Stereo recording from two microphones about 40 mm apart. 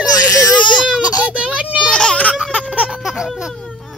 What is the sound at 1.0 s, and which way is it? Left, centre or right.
Baby cry, right.